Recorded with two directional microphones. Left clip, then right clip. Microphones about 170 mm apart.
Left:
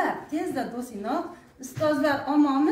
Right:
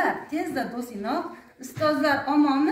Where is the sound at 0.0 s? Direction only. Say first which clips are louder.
Right 2 dB; 20° left (ahead or behind).